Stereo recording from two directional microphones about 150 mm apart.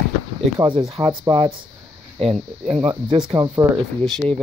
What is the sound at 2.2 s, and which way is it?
Speech, 40° right (ahead or behind).